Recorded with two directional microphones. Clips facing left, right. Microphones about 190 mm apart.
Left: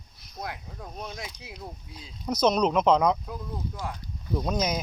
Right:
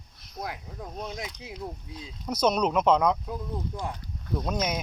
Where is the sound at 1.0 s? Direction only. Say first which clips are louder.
Right 2 dB; 20° right (ahead or behind).